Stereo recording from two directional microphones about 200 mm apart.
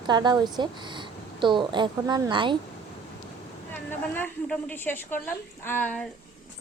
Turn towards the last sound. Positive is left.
turn(degrees=10)  # may be behind; listen again after turning